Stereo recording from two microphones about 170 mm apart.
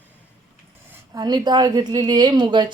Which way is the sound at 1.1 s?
25° right (ahead or behind).